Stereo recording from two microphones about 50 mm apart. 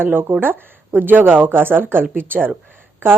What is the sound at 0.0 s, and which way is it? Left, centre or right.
Speech, right.